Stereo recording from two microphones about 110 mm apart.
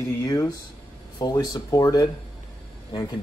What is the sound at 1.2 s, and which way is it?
Speech, 40° left (ahead or behind).